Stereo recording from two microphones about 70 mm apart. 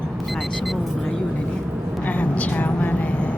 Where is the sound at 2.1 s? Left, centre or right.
Left.